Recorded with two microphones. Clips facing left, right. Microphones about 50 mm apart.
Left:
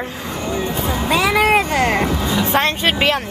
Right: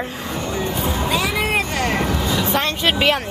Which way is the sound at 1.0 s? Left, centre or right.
Left.